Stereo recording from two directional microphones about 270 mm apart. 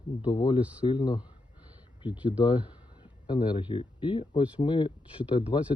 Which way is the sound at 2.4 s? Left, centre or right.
Centre.